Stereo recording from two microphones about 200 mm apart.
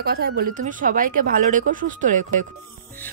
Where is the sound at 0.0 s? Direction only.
50° right (ahead or behind).